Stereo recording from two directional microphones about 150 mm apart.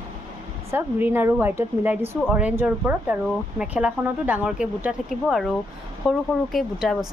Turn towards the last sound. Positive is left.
turn(degrees=0)  # may be behind; listen again after turning